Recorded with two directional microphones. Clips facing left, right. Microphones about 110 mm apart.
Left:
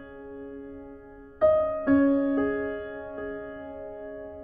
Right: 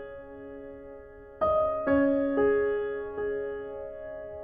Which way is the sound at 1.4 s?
35° right (ahead or behind).